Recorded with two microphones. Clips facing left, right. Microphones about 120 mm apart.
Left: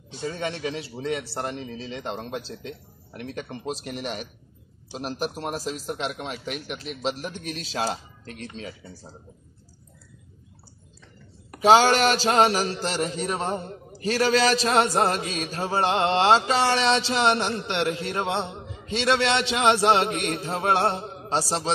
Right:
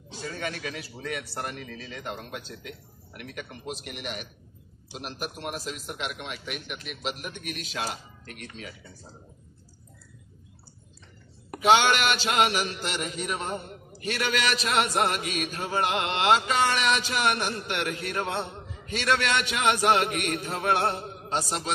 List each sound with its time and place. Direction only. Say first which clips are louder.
0.2 s a man's voice: left 5 dB; 25° left (ahead or behind)
11.6 s a man's voice: left 4 dB; 35° left (ahead or behind)